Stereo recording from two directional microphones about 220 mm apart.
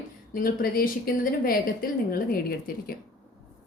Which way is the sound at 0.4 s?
40° left (ahead or behind).